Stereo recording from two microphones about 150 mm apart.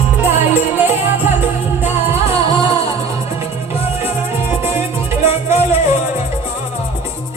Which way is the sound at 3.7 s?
40° left (ahead or behind).